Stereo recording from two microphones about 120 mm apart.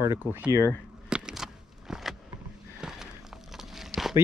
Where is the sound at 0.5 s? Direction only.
25° left (ahead or behind).